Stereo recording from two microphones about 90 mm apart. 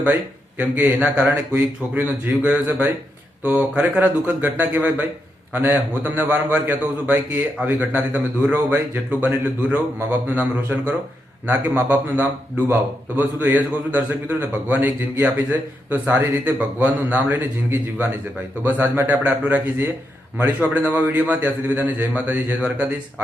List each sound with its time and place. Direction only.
0.6 s a man's voice: 15° right (ahead or behind)